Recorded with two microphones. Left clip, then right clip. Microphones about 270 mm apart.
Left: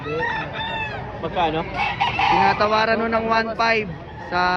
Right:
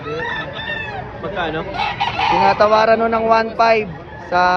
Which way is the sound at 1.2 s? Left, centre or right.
Centre.